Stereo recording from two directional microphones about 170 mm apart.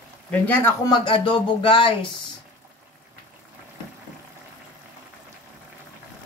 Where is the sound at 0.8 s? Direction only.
25° left (ahead or behind).